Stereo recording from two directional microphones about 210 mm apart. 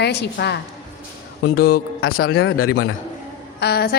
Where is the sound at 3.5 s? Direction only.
50° left (ahead or behind).